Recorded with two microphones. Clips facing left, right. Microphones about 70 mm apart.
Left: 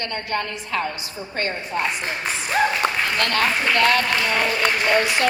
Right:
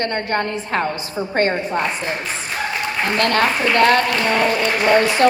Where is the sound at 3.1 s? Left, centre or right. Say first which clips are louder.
Right 4 dB; right.